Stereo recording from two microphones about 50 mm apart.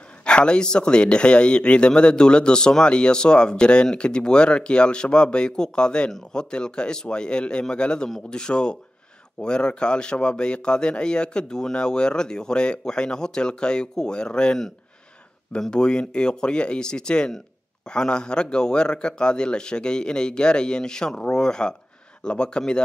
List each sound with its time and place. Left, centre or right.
0.2 s a man's voice: centre
15.7 s a man's voice: centre